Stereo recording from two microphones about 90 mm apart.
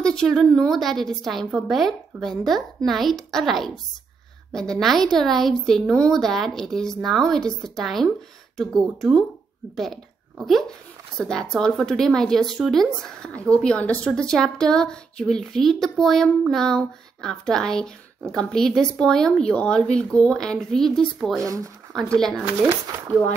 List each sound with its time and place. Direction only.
0.0 s a woman's voice: 5° left (ahead or behind)
21.4 s speech: 35° right (ahead or behind)
21.9 s speech: 5° left (ahead or behind)